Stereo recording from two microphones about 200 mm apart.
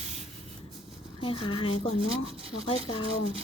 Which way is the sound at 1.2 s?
25° left (ahead or behind).